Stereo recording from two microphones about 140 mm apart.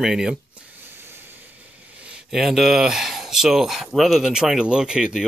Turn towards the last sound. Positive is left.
turn(degrees=-5)  # may be behind; listen again after turning